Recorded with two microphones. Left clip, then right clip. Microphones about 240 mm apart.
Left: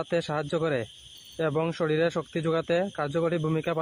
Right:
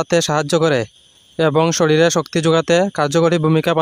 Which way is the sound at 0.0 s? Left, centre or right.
Right.